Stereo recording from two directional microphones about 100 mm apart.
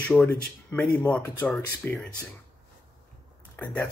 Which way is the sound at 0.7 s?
10° left (ahead or behind).